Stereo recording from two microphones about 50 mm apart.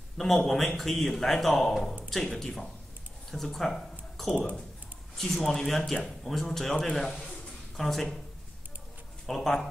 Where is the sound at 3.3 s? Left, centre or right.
Centre.